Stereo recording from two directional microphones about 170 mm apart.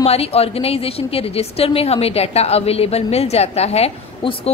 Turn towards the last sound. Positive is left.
turn(degrees=35)  # may be behind; listen again after turning